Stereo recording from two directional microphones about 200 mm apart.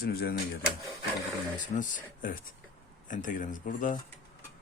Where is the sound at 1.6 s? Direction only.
40° left (ahead or behind).